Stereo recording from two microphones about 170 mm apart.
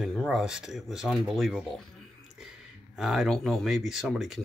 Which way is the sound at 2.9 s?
Centre (ahead or behind).